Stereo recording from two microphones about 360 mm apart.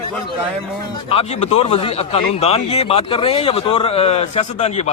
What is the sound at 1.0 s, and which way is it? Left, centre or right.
Speech, centre.